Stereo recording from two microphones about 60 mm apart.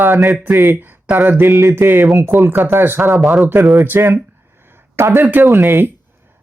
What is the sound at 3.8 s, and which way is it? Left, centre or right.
Speech, right.